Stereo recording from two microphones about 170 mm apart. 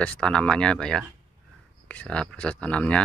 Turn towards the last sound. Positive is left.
turn(degrees=5)  # may be behind; listen again after turning